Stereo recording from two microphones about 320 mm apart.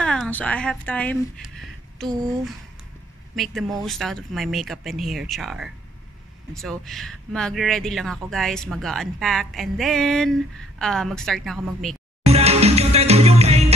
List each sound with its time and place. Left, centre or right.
0.0 s speech: centre
12.3 s music: centre